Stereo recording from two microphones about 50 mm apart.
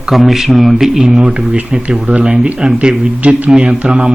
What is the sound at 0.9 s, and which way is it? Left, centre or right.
Speech, centre.